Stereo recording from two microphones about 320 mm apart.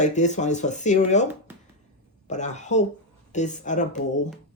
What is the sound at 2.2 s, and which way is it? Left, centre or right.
Speech, left.